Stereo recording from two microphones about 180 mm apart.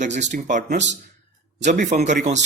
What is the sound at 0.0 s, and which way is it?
A man's voice, 40° right (ahead or behind).